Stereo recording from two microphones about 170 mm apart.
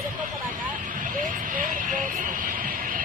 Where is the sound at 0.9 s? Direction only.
50° right (ahead or behind).